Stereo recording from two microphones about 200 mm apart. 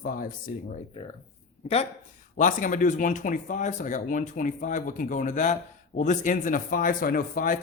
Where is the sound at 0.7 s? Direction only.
25° left (ahead or behind).